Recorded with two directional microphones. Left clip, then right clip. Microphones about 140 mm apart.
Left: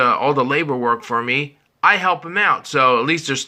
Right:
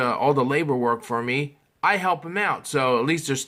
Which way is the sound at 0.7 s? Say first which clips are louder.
Left 4 dB; 25° right (ahead or behind).